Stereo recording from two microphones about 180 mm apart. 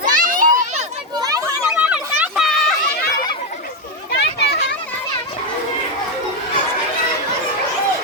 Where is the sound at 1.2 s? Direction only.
20° right (ahead or behind).